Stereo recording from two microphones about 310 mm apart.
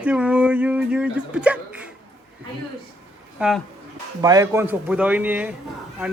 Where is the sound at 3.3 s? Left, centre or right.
Centre.